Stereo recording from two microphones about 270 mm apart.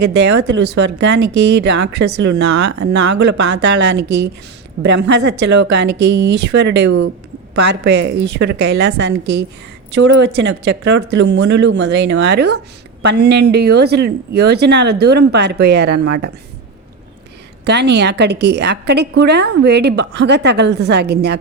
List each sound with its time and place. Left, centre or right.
0.0 s a woman's voice: right
1.2 s speech: right
1.5 s a woman's voice: right
17.7 s a woman's voice: right